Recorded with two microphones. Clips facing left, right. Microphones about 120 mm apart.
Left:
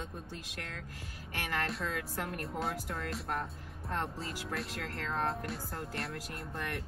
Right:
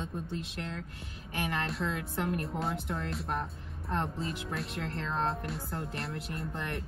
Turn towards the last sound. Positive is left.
turn(degrees=-25)  # may be behind; listen again after turning